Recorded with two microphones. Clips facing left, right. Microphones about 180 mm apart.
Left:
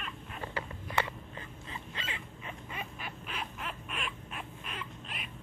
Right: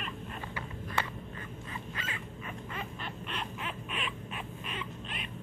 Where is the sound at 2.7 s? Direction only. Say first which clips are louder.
Right 2 dB; 5° left (ahead or behind).